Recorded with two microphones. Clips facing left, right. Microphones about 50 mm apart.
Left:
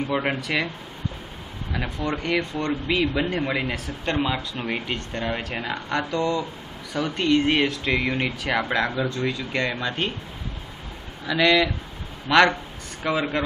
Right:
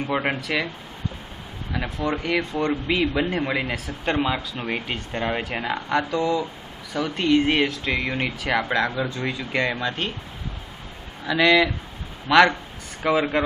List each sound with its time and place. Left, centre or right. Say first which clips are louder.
0.2 s speech: even; centre
1.7 s speech: right 2 dB; centre
9.0 s speech: left 1 dB; centre
11.2 s speech: right 2 dB; centre